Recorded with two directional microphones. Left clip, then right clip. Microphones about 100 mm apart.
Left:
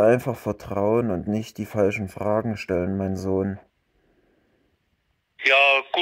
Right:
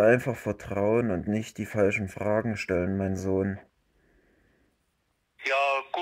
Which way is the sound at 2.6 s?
50° left (ahead or behind).